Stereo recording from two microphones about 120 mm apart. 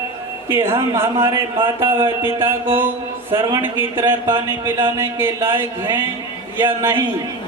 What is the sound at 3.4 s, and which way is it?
Speech, 40° right (ahead or behind).